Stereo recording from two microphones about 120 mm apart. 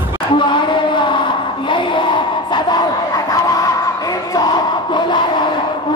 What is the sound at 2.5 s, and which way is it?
Crowd, 35° left (ahead or behind).